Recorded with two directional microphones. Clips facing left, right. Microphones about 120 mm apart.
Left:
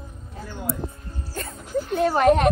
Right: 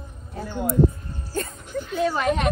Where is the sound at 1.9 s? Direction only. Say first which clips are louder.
Left 5 dB; 50° left (ahead or behind).